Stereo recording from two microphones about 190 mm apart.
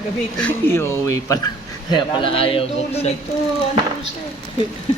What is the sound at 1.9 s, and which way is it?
A man's voice, 30° left (ahead or behind).